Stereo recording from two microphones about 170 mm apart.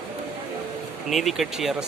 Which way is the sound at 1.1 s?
Centre (ahead or behind).